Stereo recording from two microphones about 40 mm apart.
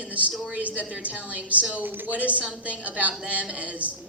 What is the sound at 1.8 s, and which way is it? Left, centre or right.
Speech, right.